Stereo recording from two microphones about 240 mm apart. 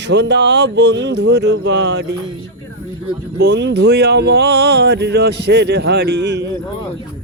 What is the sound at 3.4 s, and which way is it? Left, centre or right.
Speech, right.